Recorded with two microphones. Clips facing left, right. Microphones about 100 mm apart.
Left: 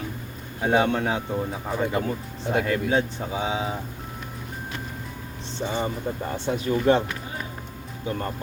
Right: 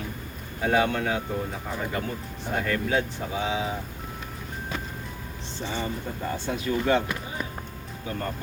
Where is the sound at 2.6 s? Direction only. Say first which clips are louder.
Even; 25° left (ahead or behind).